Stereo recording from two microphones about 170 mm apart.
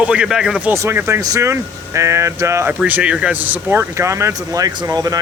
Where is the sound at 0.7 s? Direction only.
15° right (ahead or behind).